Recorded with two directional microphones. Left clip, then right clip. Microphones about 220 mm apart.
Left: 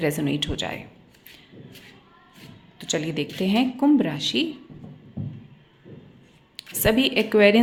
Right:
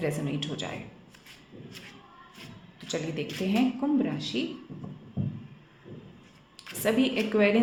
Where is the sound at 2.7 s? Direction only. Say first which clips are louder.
Left 6 dB; 25° left (ahead or behind).